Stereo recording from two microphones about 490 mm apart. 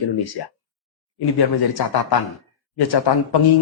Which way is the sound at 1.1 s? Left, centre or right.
Left.